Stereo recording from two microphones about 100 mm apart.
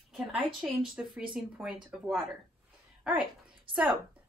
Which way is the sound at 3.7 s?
60° right (ahead or behind).